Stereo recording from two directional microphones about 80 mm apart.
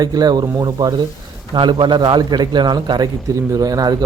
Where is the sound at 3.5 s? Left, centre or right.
Right.